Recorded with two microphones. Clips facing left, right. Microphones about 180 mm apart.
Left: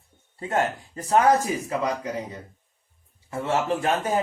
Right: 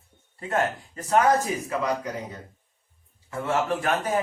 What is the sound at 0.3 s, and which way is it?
Speech, 30° left (ahead or behind).